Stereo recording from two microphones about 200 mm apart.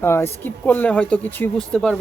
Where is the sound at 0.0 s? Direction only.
10° left (ahead or behind).